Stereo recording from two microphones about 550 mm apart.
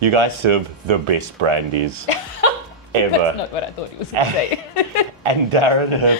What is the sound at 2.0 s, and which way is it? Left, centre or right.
Speech, left.